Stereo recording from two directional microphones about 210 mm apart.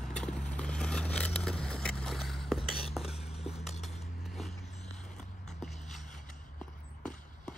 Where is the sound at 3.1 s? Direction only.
30° left (ahead or behind).